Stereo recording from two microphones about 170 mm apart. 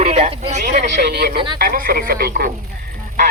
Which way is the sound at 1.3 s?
30° right (ahead or behind).